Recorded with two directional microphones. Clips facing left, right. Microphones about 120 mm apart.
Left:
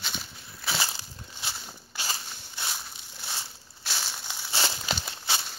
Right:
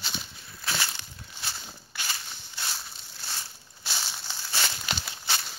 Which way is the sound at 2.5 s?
10° left (ahead or behind).